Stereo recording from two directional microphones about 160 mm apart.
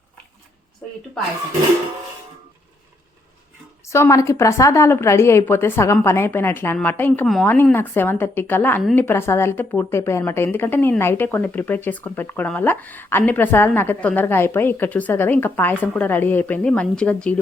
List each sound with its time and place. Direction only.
3.8 s a woman's voice: 15° left (ahead or behind)